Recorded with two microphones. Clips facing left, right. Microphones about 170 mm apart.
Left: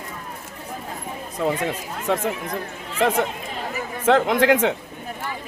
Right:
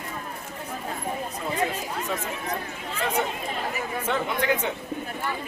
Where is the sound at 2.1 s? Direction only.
85° left.